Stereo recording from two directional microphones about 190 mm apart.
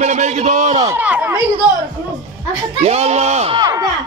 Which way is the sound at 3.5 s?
20° right (ahead or behind).